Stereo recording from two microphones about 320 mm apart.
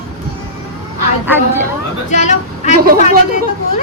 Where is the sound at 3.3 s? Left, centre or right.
Right.